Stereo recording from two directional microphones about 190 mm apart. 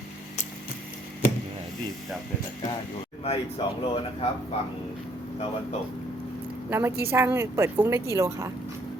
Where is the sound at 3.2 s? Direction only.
30° left (ahead or behind).